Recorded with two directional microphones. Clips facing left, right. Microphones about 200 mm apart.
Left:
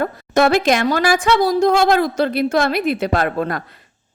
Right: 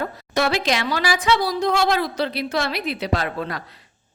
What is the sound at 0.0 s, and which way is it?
A woman's voice, 50° left (ahead or behind).